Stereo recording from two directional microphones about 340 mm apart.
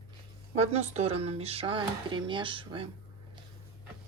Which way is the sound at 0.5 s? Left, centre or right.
Centre.